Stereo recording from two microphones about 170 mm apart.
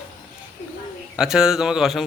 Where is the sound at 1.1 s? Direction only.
5° right (ahead or behind).